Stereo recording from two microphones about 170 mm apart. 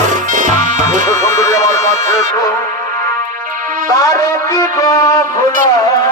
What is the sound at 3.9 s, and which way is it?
Speech, 20° left (ahead or behind).